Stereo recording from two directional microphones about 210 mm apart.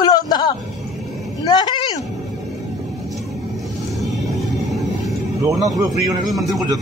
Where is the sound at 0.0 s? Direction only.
20° left (ahead or behind).